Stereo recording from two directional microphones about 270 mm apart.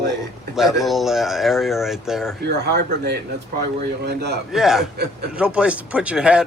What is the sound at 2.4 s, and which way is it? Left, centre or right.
Speech, right.